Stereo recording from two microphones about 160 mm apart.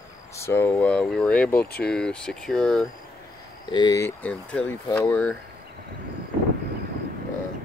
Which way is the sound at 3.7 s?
25° left (ahead or behind).